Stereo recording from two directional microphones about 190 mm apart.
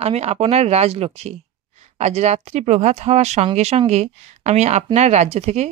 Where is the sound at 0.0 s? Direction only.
35° right (ahead or behind).